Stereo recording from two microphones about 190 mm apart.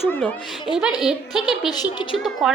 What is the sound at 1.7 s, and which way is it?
Speech, 20° left (ahead or behind).